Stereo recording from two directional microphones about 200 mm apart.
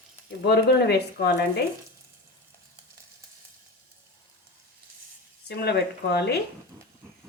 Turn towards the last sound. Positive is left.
turn(degrees=55)  # may be behind; listen again after turning